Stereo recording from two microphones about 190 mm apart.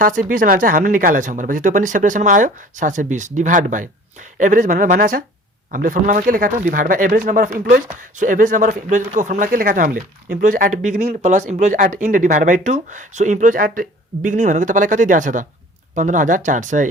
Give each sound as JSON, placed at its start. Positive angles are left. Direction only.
{"t": 0.0, "sound": "speech", "side_deg": -45}